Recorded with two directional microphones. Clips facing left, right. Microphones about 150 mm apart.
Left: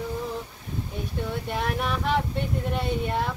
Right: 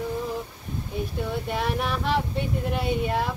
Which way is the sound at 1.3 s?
Centre (ahead or behind).